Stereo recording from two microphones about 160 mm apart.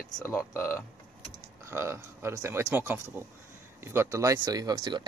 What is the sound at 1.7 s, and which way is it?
Speech, 15° right (ahead or behind).